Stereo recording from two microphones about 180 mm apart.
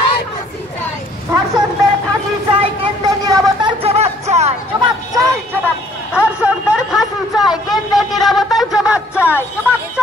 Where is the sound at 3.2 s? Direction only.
20° right (ahead or behind).